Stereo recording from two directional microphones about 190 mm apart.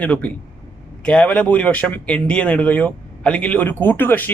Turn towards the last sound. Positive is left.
turn(degrees=10)  # may be behind; listen again after turning